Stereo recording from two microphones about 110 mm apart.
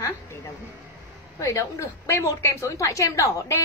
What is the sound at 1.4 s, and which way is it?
A woman's voice, 30° left (ahead or behind).